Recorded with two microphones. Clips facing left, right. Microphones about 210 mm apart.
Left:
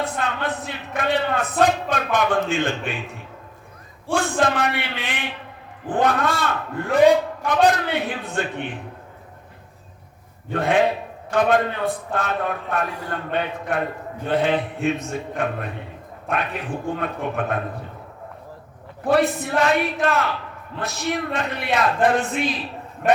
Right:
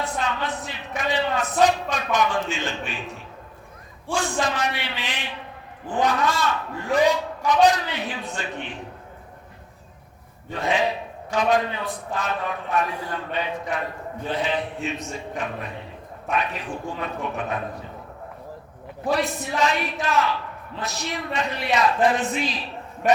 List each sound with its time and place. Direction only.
0.0 s a sound: 55° left (ahead or behind)
4.1 s a man's voice: 55° left (ahead or behind)
10.5 s a man's voice: 55° left (ahead or behind)
17.0 s a man's voice: 55° left (ahead or behind)
19.1 s a man's voice: 55° left (ahead or behind)